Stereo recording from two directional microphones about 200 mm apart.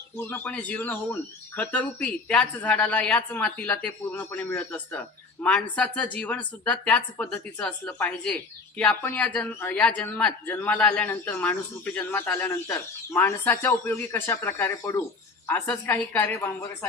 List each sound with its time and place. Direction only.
0.2 s speech: 10° left (ahead or behind)